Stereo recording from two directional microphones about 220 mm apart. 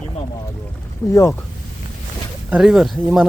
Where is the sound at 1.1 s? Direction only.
15° left (ahead or behind).